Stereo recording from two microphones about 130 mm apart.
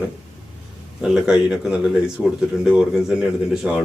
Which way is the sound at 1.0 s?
5° right (ahead or behind).